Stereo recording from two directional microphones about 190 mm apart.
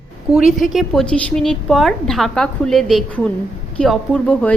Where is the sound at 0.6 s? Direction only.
Centre (ahead or behind).